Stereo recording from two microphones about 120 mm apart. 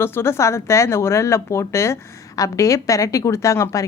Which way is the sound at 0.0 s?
20° left (ahead or behind).